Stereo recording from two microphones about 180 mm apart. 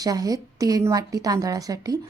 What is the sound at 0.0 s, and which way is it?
A woman's voice, 20° right (ahead or behind).